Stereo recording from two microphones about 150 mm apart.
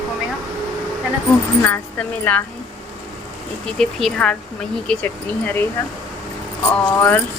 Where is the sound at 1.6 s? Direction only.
10° left (ahead or behind).